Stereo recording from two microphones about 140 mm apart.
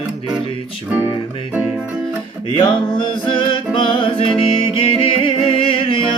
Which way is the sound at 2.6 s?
35° left (ahead or behind).